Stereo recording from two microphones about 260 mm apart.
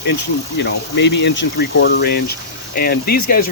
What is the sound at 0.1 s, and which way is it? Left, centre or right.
Speech, left.